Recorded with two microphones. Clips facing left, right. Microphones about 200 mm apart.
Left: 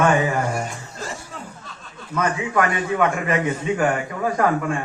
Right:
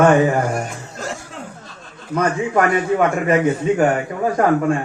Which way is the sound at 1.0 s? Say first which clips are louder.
Right 4 dB; 70° right (ahead or behind).